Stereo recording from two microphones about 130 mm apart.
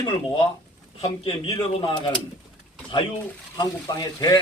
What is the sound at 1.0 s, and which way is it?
Speech, 50° left (ahead or behind).